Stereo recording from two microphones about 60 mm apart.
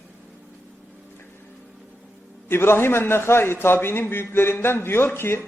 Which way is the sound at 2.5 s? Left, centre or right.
Left.